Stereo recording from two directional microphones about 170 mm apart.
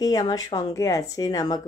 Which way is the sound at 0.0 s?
20° left (ahead or behind).